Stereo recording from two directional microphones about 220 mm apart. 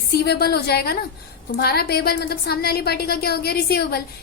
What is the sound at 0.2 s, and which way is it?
A woman's voice, 45° left (ahead or behind).